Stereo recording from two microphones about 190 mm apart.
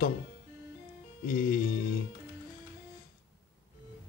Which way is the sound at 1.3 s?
50° left (ahead or behind).